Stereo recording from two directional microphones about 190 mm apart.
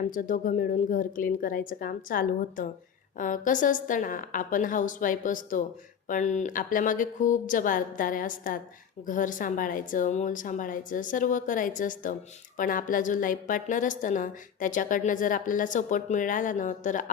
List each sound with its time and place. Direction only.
0.1 s a woman's voice: 45° left (ahead or behind)